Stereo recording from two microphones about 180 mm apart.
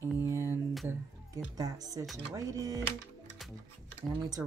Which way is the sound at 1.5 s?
20° right (ahead or behind).